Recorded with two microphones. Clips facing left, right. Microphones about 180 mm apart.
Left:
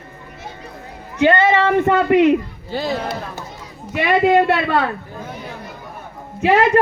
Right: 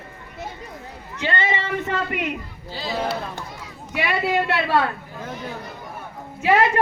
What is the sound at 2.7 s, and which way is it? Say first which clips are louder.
Speech: left 4 dB; 55° left (ahead or behind).